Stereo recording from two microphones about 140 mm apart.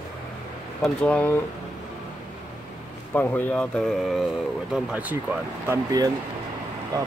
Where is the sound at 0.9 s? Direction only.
10° left (ahead or behind).